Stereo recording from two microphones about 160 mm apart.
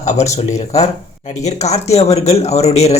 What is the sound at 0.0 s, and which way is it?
Speech, 45° left (ahead or behind).